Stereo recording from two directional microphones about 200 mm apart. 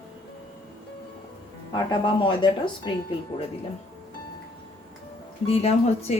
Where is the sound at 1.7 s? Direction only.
25° left (ahead or behind).